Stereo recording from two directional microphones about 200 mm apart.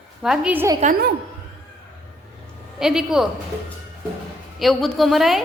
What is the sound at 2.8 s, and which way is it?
Speech, centre (ahead or behind).